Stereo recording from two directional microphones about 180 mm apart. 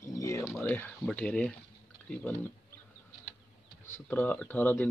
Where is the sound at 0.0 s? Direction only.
15° left (ahead or behind).